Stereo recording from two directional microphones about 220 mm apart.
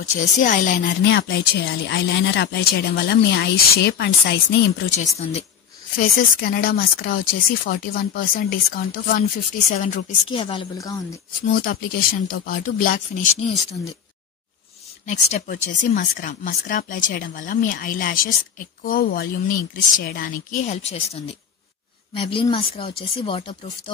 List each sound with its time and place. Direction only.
0.4 s speech: 35° left (ahead or behind)
0.8 s speech: 50° left (ahead or behind)
4.9 s speech: 30° left (ahead or behind)
5.9 s speech: 45° left (ahead or behind)
10.3 s speech: 25° left (ahead or behind)
11.5 s speech: 40° left (ahead or behind)
15.0 s speech: 35° left (ahead or behind)